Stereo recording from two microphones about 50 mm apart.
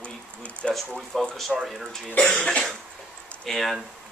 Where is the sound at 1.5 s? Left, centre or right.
Centre.